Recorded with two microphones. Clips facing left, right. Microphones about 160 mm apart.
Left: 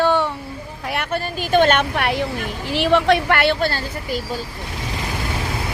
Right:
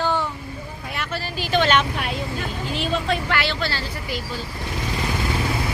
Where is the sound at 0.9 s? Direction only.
55° left (ahead or behind).